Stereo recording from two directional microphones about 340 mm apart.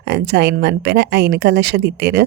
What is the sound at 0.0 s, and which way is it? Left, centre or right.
Speech, right.